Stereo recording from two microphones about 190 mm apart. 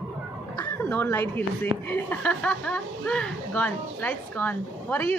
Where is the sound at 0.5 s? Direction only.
15° left (ahead or behind).